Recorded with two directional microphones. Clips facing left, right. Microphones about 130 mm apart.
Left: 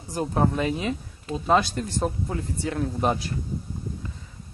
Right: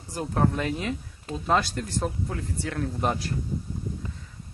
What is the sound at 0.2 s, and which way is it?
Speech, 10° left (ahead or behind).